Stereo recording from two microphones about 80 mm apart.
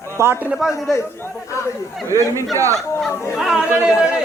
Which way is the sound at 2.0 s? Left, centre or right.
Right.